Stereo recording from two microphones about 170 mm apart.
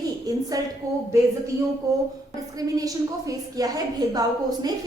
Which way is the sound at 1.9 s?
20° right (ahead or behind).